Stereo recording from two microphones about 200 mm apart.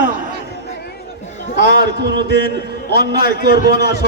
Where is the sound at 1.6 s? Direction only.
60° right (ahead or behind).